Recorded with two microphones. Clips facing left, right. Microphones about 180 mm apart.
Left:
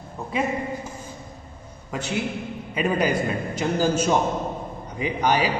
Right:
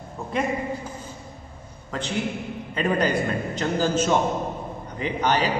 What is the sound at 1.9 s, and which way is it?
A man's voice, 10° left (ahead or behind).